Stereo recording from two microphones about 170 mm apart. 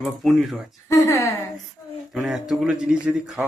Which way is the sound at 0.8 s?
15° left (ahead or behind).